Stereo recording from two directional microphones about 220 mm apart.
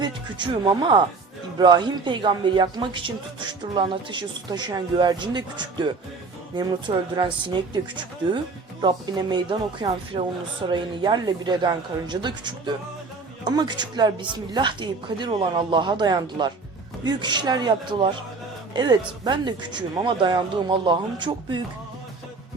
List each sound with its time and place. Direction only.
0.0 s a woman's voice: 20° right (ahead or behind)